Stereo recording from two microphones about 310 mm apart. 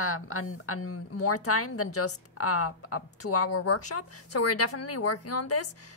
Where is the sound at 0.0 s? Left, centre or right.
Left.